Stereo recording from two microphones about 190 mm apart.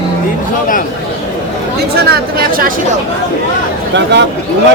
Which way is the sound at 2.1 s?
50° right (ahead or behind).